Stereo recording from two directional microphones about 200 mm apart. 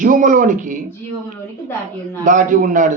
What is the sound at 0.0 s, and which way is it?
Speech, 40° right (ahead or behind).